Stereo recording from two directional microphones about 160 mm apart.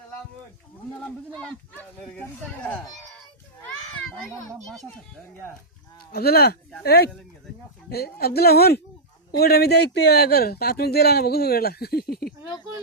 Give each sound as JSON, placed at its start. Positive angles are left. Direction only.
{"t": 1.0, "sound": "speech", "side_deg": 5}
{"t": 4.6, "sound": "speech", "side_deg": 0}
{"t": 6.1, "sound": "speech", "side_deg": 75}
{"t": 6.8, "sound": "speech", "side_deg": 90}
{"t": 7.9, "sound": "a woman's voice", "side_deg": 75}